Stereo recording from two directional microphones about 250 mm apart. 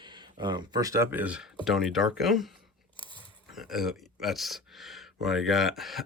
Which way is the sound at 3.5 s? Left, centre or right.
Centre.